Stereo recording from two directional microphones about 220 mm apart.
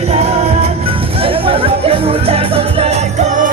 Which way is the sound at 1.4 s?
25° right (ahead or behind).